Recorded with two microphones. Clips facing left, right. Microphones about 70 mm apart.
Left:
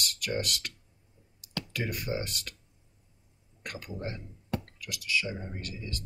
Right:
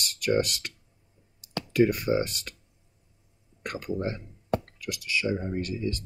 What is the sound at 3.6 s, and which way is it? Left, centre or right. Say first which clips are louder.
Speech: right 7 dB; right.